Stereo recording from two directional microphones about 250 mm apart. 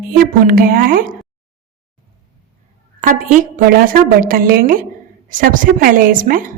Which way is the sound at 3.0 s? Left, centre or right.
Right.